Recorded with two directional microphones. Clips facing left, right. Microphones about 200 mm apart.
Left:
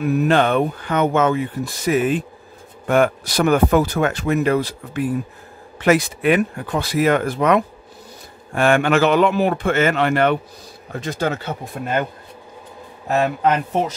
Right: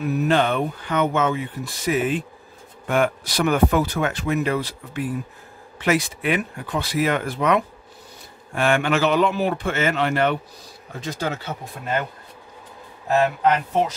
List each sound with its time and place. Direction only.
0.0 s a man's voice: 60° left (ahead or behind)